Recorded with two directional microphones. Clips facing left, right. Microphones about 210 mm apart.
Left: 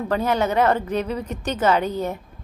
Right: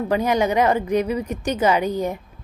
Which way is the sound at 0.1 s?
15° right (ahead or behind).